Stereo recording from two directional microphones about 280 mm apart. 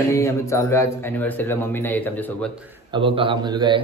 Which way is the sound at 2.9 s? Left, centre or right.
Centre.